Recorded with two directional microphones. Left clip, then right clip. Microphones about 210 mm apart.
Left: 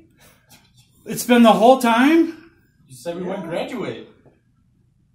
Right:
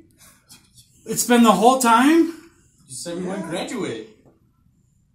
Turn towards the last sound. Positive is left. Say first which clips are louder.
# left 1 dB
turn(degrees=0)  # may be behind; listen again after turning